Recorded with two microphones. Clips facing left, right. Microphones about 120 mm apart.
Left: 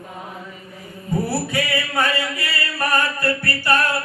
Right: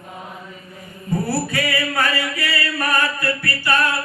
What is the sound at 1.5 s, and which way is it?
Music, 20° left (ahead or behind).